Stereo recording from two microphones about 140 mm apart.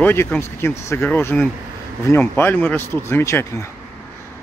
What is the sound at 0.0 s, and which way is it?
Speech, 15° left (ahead or behind).